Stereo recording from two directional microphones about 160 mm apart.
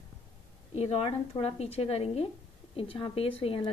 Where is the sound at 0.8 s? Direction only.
40° left (ahead or behind).